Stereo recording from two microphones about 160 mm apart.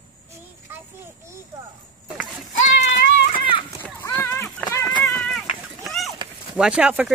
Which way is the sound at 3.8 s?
10° left (ahead or behind).